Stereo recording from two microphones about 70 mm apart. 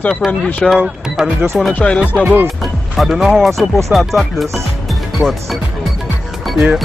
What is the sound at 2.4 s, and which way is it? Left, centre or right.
Speech, centre.